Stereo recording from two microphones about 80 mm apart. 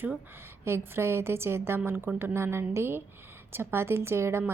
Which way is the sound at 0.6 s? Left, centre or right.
Right.